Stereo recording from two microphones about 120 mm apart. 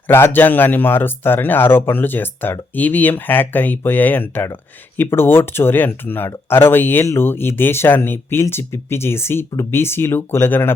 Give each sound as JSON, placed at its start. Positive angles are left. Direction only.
{"t": 0.1, "sound": "speech", "side_deg": 20}